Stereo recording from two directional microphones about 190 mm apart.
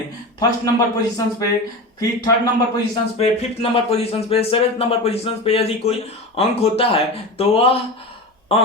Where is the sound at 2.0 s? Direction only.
20° left (ahead or behind).